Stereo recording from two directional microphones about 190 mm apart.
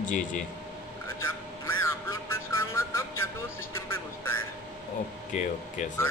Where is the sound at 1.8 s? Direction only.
15° left (ahead or behind).